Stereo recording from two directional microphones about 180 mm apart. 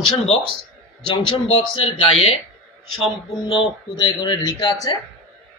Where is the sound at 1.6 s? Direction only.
30° left (ahead or behind).